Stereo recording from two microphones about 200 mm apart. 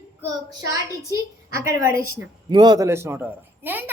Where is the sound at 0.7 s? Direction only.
15° right (ahead or behind).